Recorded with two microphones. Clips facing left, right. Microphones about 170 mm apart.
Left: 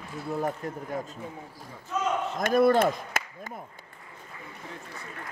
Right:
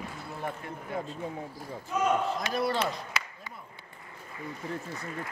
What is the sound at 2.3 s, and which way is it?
Speech, 50° left (ahead or behind).